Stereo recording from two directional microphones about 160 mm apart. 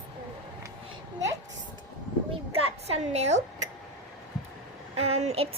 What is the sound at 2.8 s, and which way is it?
Speech, 40° right (ahead or behind).